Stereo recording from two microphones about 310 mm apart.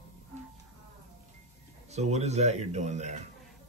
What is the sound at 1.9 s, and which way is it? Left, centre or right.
Speech, right.